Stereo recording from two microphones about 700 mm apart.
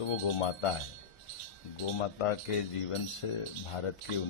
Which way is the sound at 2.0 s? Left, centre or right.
Left.